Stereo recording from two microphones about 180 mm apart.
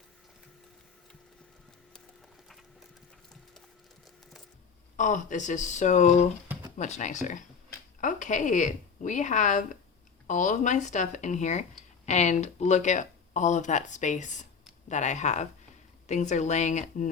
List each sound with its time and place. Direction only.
4.9 s speech: 45° left (ahead or behind)
6.5 s a sound: 20° right (ahead or behind)
6.7 s speech: 40° left (ahead or behind)